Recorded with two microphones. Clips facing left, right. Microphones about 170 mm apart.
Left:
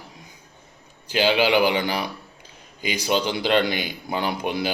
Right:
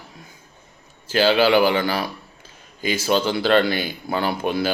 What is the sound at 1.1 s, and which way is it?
A man's voice, 15° left (ahead or behind).